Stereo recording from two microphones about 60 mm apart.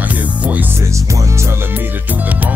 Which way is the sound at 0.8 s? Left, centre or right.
Right.